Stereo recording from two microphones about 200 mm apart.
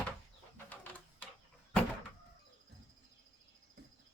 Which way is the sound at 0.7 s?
10° left (ahead or behind).